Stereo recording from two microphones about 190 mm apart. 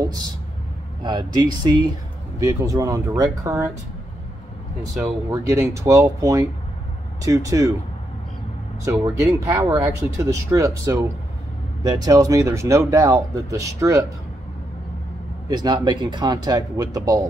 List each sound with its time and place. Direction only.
1.0 s speech: 20° right (ahead or behind)
5.3 s speech: 15° right (ahead or behind)
9.0 s speech: 15° right (ahead or behind)
15.4 s speech: 20° right (ahead or behind)